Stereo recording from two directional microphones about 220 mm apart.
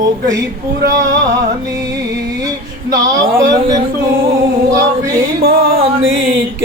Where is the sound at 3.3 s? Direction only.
15° right (ahead or behind).